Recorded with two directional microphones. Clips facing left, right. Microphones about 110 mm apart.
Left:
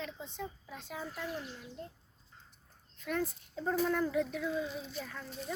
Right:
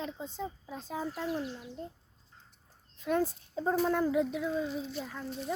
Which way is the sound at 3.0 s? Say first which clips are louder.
Right 6 dB; 30° right (ahead or behind).